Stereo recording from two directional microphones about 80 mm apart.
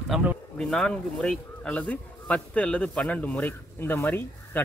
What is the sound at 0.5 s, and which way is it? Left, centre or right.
A man's voice, centre.